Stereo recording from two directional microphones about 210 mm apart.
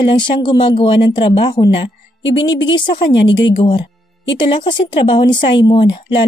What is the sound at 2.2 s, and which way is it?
Speech, 60° left (ahead or behind).